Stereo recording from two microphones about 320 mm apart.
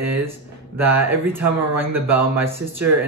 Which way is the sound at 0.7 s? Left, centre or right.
Centre.